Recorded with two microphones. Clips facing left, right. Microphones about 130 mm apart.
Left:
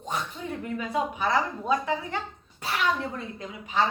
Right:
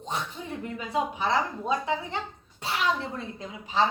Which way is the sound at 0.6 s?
25° right (ahead or behind).